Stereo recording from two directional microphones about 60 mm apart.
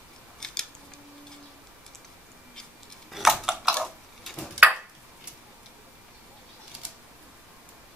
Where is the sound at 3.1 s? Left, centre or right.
Centre.